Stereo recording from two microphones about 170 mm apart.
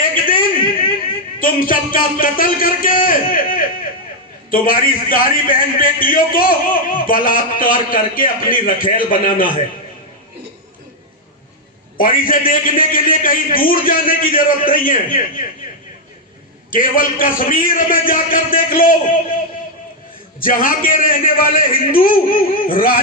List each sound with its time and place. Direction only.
0.3 s a sound: 55° left (ahead or behind)
1.4 s a man's voice: 55° left (ahead or behind)
11.9 s a man's voice: 55° left (ahead or behind)
16.7 s a man's voice: 55° left (ahead or behind)
20.4 s a man's voice: 55° left (ahead or behind)